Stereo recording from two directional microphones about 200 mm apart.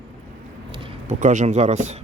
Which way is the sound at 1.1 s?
40° right (ahead or behind).